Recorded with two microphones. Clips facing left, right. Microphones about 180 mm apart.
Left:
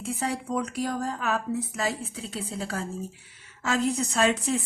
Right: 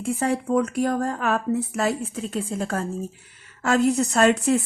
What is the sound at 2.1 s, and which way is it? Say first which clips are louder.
Speech: right 7 dB; 75° right (ahead or behind).